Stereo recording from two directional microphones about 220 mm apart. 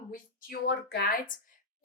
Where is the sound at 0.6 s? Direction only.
45° left (ahead or behind).